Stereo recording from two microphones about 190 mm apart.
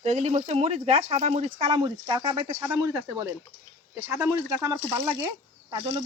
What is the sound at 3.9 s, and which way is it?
Speech, 15° right (ahead or behind).